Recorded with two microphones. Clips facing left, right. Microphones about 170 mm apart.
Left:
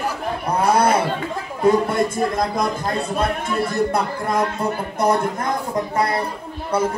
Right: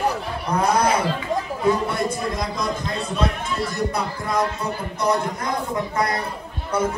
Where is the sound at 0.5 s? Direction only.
30° left (ahead or behind).